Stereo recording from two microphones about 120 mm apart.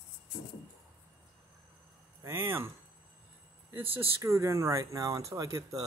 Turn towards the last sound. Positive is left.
turn(degrees=-30)  # may be behind; listen again after turning